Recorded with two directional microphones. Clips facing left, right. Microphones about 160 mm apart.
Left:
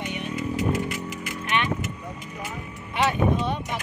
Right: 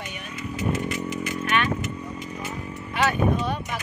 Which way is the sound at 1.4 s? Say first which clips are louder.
Right 1 dB; 20° left (ahead or behind).